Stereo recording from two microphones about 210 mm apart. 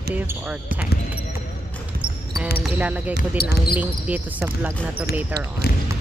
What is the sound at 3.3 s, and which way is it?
Speech, 45° left (ahead or behind).